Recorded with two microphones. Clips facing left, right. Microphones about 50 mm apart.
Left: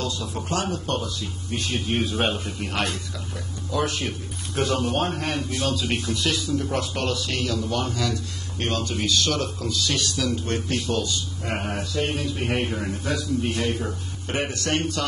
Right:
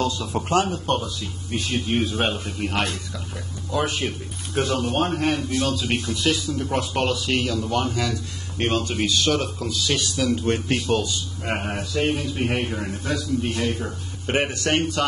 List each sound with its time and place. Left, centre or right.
0.0 s speech: right
0.4 s speech: right
1.2 s a man's voice: centre
3.7 s speech: centre
4.6 s a man's voice: centre
10.9 s a man's voice: right
11.5 s a man's voice: centre
14.3 s speech: right